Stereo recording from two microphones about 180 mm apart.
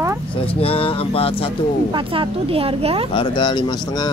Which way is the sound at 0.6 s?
30° left (ahead or behind).